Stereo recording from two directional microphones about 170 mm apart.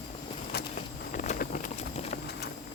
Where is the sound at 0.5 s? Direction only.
70° left (ahead or behind).